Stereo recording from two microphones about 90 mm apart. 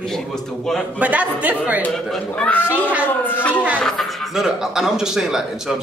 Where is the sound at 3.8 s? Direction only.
5° left (ahead or behind).